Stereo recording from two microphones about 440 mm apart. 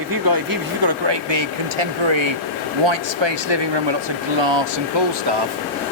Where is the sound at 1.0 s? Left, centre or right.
Right.